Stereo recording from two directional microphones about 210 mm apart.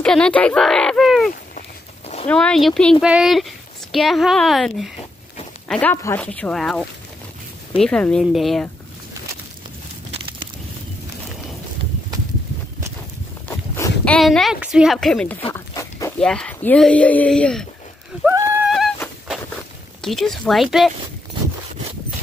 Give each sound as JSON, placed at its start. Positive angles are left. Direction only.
{"t": 0.0, "sound": "speech", "side_deg": 5}
{"t": 13.5, "sound": "speech", "side_deg": 10}
{"t": 15.5, "sound": "pig", "side_deg": 15}
{"t": 16.2, "sound": "speech", "side_deg": 5}
{"t": 18.2, "sound": "horse", "side_deg": -10}
{"t": 20.0, "sound": "speech", "side_deg": 0}